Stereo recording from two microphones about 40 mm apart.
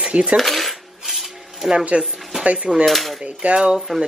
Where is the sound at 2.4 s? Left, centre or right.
Right.